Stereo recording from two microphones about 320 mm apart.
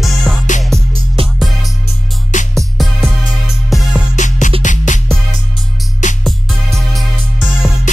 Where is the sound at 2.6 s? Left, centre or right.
Centre.